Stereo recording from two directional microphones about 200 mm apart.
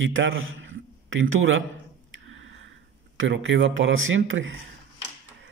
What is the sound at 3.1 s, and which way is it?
Speech, 70° right (ahead or behind).